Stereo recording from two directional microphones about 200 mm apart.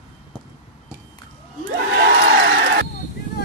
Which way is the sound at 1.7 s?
65° right (ahead or behind).